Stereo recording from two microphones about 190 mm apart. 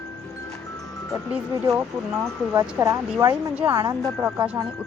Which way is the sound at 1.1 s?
5° right (ahead or behind).